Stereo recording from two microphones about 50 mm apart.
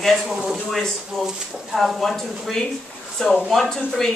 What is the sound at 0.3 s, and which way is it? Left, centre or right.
Speech, centre.